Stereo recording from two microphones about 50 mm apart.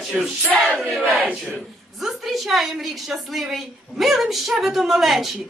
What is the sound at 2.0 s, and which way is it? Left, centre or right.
A woman's voice, centre.